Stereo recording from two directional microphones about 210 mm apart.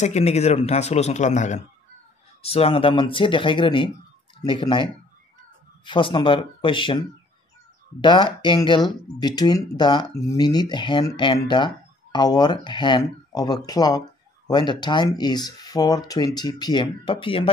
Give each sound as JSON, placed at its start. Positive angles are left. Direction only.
{"t": 0.0, "sound": "speech", "side_deg": 30}